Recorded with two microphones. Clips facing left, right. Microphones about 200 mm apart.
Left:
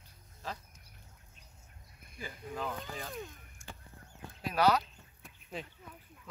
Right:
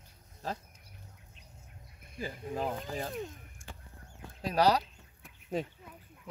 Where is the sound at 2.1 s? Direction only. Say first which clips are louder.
Right 5 dB; 35° right (ahead or behind).